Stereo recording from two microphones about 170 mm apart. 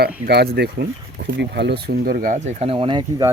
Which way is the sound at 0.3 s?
70° right (ahead or behind).